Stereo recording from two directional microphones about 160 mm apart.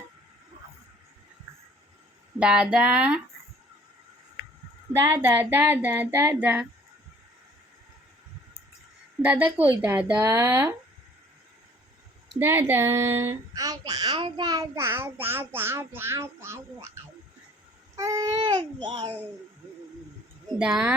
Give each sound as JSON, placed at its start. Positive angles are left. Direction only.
{"t": 2.4, "sound": "a child's voice", "side_deg": -5}
{"t": 5.0, "sound": "a child's voice", "side_deg": -15}
{"t": 9.2, "sound": "a child's voice", "side_deg": -10}
{"t": 12.4, "sound": "a child's voice", "side_deg": -15}
{"t": 20.6, "sound": "speech", "side_deg": -5}